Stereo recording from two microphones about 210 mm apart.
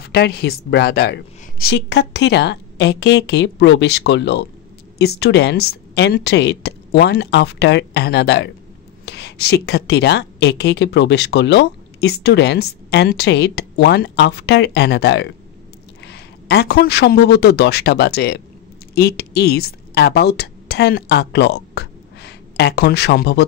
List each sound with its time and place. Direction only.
0.1 s a woman's voice: 50° left (ahead or behind)